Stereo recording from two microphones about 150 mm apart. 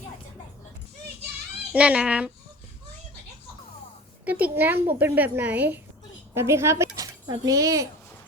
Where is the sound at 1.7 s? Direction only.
10° right (ahead or behind).